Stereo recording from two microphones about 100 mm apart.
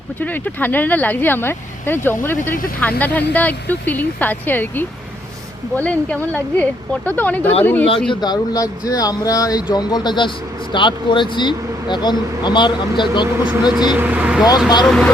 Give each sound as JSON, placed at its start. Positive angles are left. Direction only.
{"t": 0.2, "sound": "speech", "side_deg": 20}
{"t": 8.1, "sound": "speech", "side_deg": 45}
{"t": 13.7, "sound": "speech", "side_deg": -10}
{"t": 14.8, "sound": "speech", "side_deg": 5}